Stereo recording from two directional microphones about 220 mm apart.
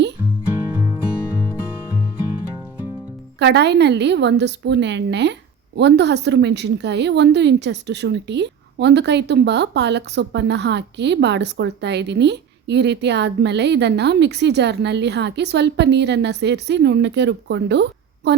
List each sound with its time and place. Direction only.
3.3 s a woman's voice: 50° right (ahead or behind)